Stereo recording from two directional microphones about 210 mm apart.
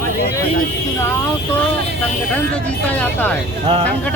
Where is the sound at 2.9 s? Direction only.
10° left (ahead or behind).